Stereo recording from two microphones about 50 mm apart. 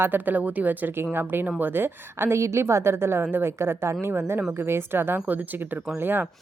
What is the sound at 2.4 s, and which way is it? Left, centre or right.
A woman's voice, right.